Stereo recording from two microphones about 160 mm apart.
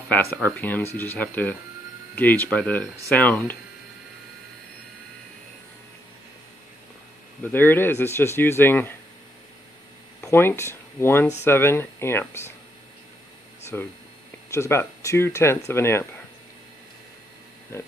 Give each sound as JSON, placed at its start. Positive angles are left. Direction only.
{"t": 0.1, "sound": "speech", "side_deg": 10}
{"t": 7.4, "sound": "speech", "side_deg": 10}
{"t": 10.2, "sound": "speech", "side_deg": 15}
{"t": 13.7, "sound": "speech", "side_deg": 15}
{"t": 17.7, "sound": "speech", "side_deg": 15}